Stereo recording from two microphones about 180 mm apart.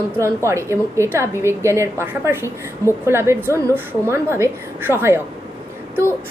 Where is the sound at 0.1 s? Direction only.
15° right (ahead or behind).